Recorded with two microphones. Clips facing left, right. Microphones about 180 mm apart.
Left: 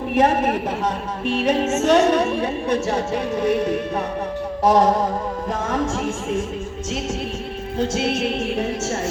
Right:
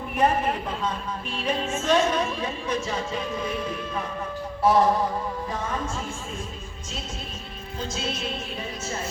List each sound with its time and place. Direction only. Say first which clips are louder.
0.1 s a woman's voice: left 5 dB; 80° left
4.6 s a sound: left 4 dB; 45° left (ahead or behind)
5.6 s a woman's voice: left 10 dB; 90° left
7.8 s a woman's voice: left 10 dB; 70° left (ahead or behind)